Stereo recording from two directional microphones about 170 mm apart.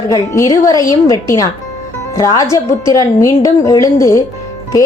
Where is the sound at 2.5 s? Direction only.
20° left (ahead or behind).